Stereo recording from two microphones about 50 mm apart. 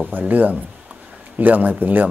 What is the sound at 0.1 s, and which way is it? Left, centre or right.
Speech, right.